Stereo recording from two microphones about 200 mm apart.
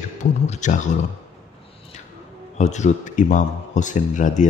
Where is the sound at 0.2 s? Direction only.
35° left (ahead or behind).